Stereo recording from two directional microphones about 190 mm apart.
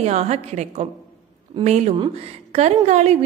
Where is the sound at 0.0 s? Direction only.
35° right (ahead or behind).